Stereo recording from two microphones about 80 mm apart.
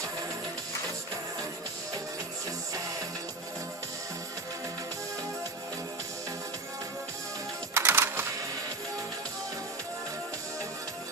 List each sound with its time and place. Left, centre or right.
7.7 s music: right